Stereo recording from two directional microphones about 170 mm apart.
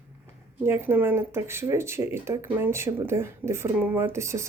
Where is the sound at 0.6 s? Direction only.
15° right (ahead or behind).